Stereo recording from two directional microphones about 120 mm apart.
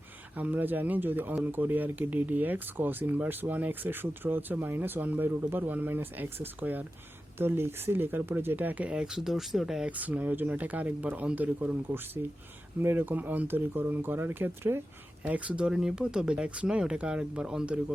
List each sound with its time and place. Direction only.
0.3 s speech: 15° right (ahead or behind)